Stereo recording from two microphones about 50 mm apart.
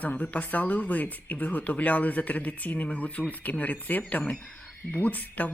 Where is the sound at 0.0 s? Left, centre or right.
Left.